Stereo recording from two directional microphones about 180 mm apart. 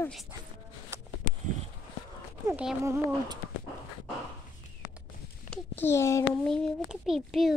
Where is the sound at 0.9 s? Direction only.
15° right (ahead or behind).